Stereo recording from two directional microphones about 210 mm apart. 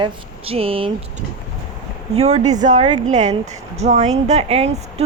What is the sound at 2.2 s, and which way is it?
Speech, 35° right (ahead or behind).